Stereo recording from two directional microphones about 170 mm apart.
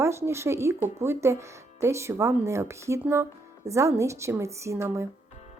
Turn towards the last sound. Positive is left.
turn(degrees=-15)  # may be behind; listen again after turning